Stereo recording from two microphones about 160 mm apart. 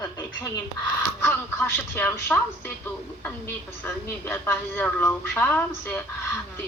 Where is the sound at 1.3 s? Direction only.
10° left (ahead or behind).